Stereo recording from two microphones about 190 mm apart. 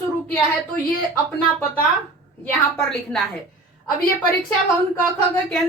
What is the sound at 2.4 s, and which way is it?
Speech, 5° left (ahead or behind).